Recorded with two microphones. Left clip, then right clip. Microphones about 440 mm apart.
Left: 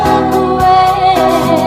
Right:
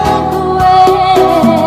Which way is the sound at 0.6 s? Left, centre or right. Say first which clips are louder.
Right 2 dB; centre.